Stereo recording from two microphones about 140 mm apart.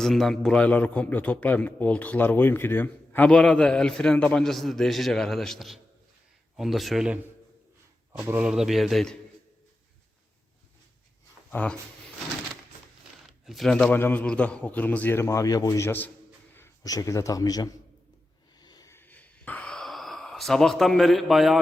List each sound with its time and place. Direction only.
0.0 s a man's voice: centre (ahead or behind)
8.2 s speech: 15° right (ahead or behind)
8.4 s speech: 5° right (ahead or behind)
11.5 s a man's voice: 10° left (ahead or behind)
13.4 s a man's voice: centre (ahead or behind)
16.6 s a man's voice: 25° left (ahead or behind)
18.6 s a sound: 30° left (ahead or behind); by 21.6 s centre (ahead or behind)